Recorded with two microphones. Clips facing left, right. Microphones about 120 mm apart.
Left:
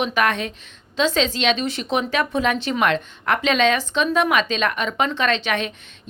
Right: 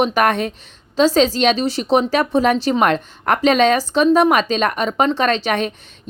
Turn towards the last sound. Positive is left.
turn(degrees=-40)  # may be behind; listen again after turning